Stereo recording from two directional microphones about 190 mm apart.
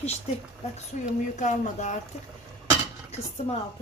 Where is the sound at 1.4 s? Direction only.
40° left (ahead or behind).